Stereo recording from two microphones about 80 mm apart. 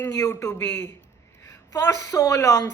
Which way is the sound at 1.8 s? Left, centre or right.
Left.